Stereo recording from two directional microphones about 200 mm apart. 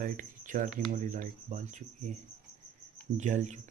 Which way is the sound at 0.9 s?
40° right (ahead or behind).